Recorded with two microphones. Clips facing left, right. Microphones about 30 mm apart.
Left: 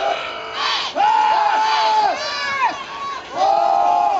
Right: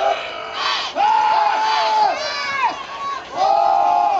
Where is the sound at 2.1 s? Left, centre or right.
Centre.